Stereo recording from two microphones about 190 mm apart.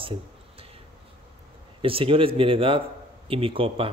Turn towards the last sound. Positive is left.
turn(degrees=-30)  # may be behind; listen again after turning